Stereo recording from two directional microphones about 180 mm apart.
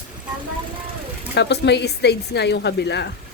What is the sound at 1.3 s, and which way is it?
A woman's voice, 70° left (ahead or behind).